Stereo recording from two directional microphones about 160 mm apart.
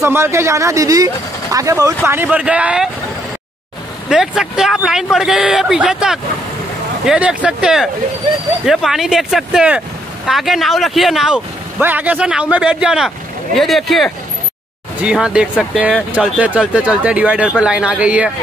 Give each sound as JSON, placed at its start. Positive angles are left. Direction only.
{"t": 0.0, "sound": "speech", "side_deg": -15}
{"t": 4.1, "sound": "speech", "side_deg": -5}